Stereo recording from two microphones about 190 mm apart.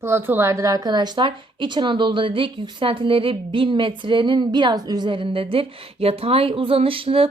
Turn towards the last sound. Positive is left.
turn(degrees=-30)  # may be behind; listen again after turning